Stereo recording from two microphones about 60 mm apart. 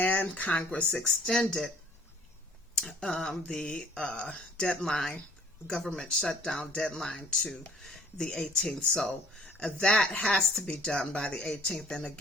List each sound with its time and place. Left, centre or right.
0.0 s speech: left
0.9 s a woman's voice: centre
2.7 s a woman's voice: centre